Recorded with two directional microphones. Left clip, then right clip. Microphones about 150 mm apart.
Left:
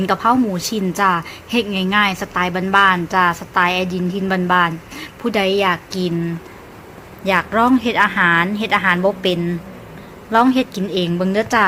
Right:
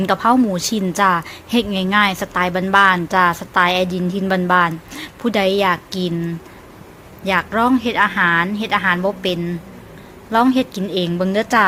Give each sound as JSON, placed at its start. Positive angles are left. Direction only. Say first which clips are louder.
{"t": 0.0, "sound": "a woman's voice", "louder": "right 1 dB", "side_deg": -15}